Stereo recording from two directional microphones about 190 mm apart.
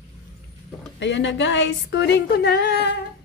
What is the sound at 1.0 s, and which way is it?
Speech, 70° left (ahead or behind).